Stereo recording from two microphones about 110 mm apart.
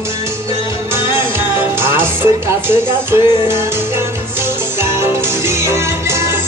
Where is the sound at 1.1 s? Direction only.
20° right (ahead or behind).